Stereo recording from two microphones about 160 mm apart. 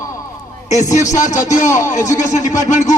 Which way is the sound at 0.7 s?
50° left (ahead or behind).